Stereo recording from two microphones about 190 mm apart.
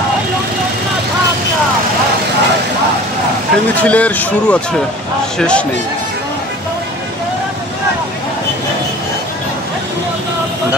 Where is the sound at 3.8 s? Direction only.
10° left (ahead or behind).